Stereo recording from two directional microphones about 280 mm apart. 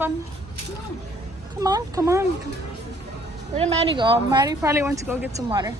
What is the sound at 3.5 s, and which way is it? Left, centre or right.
Speech, centre.